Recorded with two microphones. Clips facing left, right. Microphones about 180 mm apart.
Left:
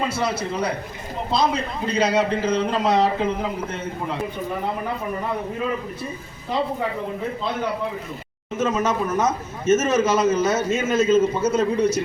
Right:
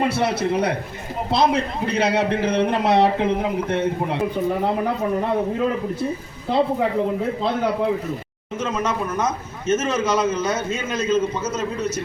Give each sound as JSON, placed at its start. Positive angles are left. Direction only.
{"t": 0.0, "sound": "a man's voice", "side_deg": -65}
{"t": 8.6, "sound": "a man's voice", "side_deg": 5}